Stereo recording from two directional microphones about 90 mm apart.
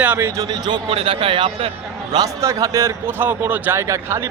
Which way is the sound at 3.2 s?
20° right (ahead or behind).